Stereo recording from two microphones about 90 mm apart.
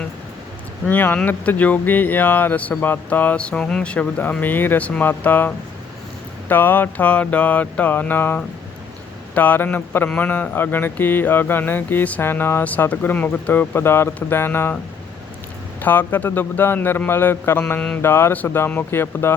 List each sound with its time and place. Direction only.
0.9 s speech: 20° left (ahead or behind)
15.8 s speech: 20° left (ahead or behind)
17.7 s mantra: 15° left (ahead or behind)
18.0 s speech: 25° left (ahead or behind)